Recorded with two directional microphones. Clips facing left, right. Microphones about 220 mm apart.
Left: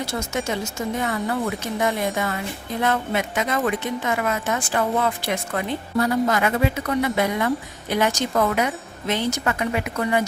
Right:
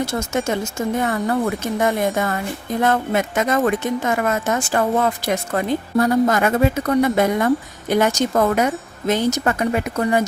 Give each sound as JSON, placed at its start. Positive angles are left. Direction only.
{"t": 0.0, "sound": "a woman's voice", "side_deg": -50}